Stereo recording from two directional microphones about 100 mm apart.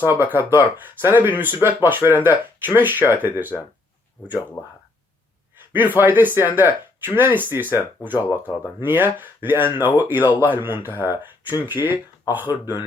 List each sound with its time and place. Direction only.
0.0 s speech: 20° right (ahead or behind)
4.6 s speech: 30° left (ahead or behind)
6.0 s speech: 20° right (ahead or behind)